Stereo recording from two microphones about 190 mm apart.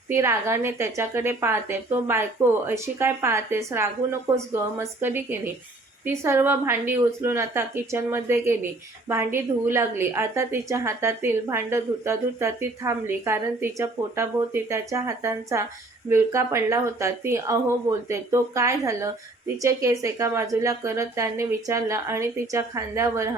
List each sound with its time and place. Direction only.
0.1 s a woman's voice: 15° right (ahead or behind)